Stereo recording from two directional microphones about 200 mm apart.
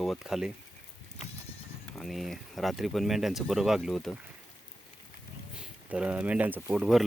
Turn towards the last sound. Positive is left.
turn(degrees=0)  # may be behind; listen again after turning